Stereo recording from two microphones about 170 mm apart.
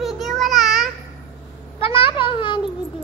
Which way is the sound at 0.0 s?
Centre (ahead or behind).